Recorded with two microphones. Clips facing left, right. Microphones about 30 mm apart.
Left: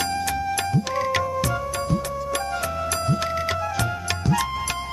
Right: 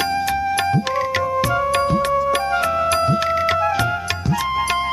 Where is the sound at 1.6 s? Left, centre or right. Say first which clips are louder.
Right 8 dB; right.